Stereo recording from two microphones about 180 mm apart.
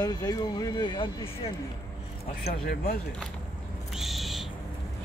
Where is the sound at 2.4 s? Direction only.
55° left (ahead or behind).